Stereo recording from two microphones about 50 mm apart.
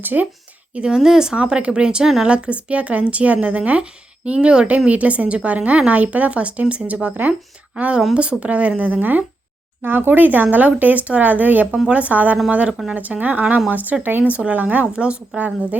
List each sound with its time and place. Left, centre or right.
0.0 s speech: right
0.7 s a woman's voice: right
0.9 s speech: centre; by 14.3 s right
14.3 s speech: right